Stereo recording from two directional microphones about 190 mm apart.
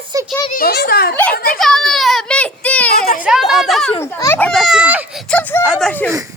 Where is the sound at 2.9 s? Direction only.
50° left (ahead or behind).